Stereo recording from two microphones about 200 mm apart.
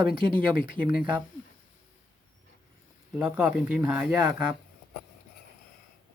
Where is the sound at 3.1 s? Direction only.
5° right (ahead or behind).